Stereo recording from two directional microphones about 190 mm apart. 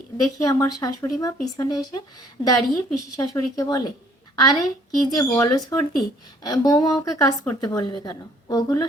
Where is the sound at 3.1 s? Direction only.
20° left (ahead or behind).